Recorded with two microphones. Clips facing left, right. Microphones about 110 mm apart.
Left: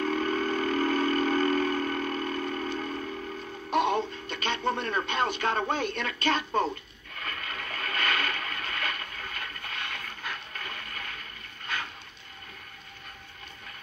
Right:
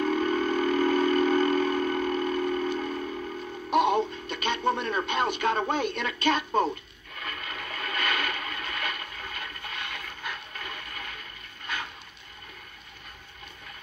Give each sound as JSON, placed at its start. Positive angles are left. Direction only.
{"t": 0.0, "sound": "vehicle", "side_deg": -20}
{"t": 3.7, "sound": "speech", "side_deg": -15}
{"t": 7.2, "sound": "a sound", "side_deg": -20}